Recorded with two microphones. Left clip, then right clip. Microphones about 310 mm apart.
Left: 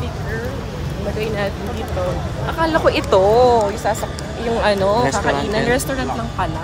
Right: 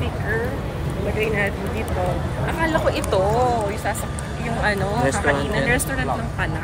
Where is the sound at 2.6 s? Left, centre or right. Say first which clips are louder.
Left 5 dB; left.